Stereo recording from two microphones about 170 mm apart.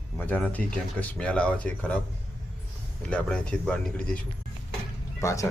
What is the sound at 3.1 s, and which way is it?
Speech, 5° left (ahead or behind).